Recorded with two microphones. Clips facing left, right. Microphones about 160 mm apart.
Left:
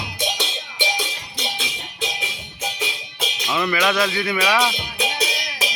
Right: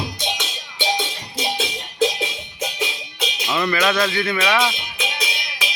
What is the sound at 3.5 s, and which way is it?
Speech, 10° left (ahead or behind).